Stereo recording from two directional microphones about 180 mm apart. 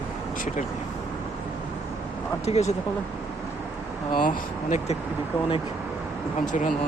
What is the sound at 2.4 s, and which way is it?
Speech, 40° left (ahead or behind).